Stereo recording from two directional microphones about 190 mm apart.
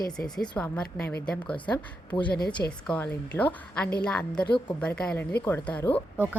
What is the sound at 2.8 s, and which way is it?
A woman's voice, 10° left (ahead or behind).